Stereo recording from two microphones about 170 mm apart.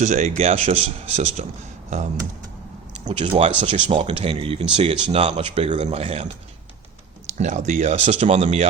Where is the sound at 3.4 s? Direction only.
30° right (ahead or behind).